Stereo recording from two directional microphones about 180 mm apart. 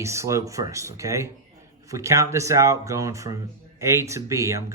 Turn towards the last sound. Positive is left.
turn(degrees=-15)  # may be behind; listen again after turning